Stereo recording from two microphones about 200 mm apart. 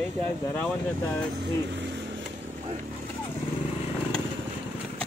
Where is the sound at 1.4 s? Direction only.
60° right (ahead or behind).